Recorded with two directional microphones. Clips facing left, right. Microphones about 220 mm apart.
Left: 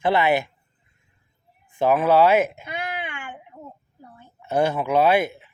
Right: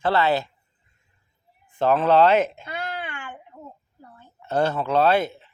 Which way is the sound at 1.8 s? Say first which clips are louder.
Even; 10° left (ahead or behind).